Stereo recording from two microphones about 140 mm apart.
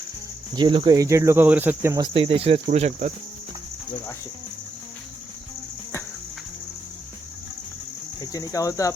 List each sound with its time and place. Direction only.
0.5 s speech: 35° right (ahead or behind)
0.9 s cricket: 20° right (ahead or behind)
2.0 s speech: 40° right (ahead or behind)
8.2 s cricket: 25° left (ahead or behind)